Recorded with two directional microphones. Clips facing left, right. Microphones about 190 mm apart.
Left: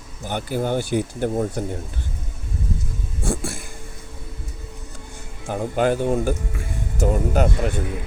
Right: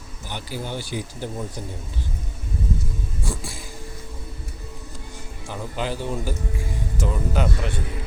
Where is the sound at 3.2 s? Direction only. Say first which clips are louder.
Left 8 dB; 50° left (ahead or behind).